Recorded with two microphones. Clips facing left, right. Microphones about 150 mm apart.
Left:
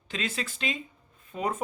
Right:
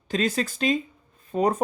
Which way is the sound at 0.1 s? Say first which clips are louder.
Right 9 dB; 40° right (ahead or behind).